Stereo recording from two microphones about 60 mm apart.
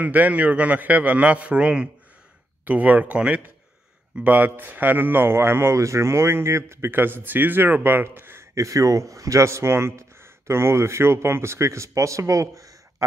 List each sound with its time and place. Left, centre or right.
0.0 s a man's voice: right
5.8 s a man's voice: right
8.5 s a man's voice: right